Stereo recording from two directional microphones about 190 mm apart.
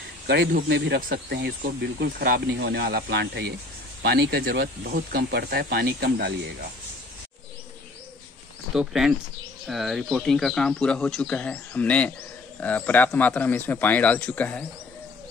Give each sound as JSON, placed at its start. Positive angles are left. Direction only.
{"t": 0.6, "sound": "speech", "side_deg": -65}
{"t": 8.7, "sound": "speech", "side_deg": 0}